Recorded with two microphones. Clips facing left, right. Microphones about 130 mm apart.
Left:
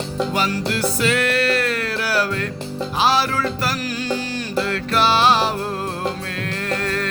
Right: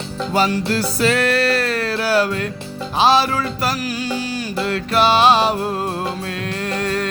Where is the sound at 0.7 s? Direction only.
35° right (ahead or behind); by 5.6 s 20° right (ahead or behind).